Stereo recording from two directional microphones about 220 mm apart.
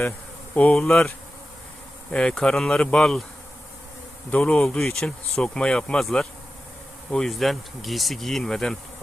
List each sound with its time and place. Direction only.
0.5 s speech: 5° left (ahead or behind)
2.1 s speech: 5° left (ahead or behind)
4.3 s speech: 5° left (ahead or behind)